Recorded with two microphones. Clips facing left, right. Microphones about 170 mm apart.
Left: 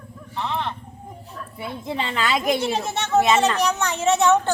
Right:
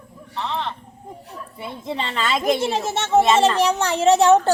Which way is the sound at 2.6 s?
25° right (ahead or behind).